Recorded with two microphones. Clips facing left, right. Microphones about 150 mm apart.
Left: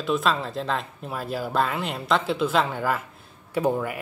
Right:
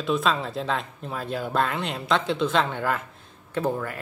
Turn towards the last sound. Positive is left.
turn(degrees=15)  # may be behind; listen again after turning